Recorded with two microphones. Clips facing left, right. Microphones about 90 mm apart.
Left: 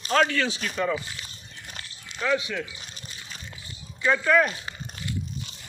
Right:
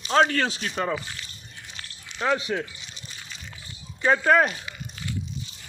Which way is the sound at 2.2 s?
40° right (ahead or behind).